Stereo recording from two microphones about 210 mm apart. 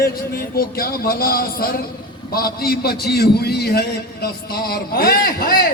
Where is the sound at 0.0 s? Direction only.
45° left (ahead or behind).